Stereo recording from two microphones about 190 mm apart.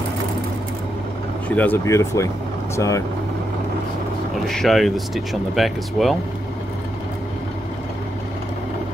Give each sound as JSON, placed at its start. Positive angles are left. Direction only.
{"t": 1.5, "sound": "speech", "side_deg": 10}
{"t": 4.5, "sound": "speech", "side_deg": 0}